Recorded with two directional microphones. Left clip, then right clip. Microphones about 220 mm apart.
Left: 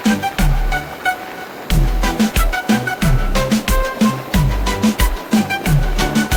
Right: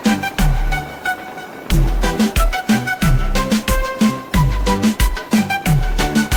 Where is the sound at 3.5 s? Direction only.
Centre (ahead or behind).